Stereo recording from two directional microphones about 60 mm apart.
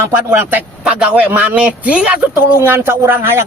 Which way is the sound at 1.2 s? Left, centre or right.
Right.